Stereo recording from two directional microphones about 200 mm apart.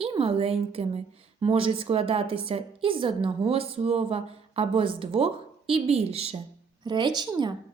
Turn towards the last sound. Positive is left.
turn(degrees=-20)  # may be behind; listen again after turning